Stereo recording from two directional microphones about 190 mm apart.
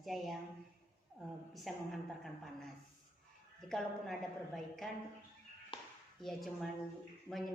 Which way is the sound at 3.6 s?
Centre (ahead or behind).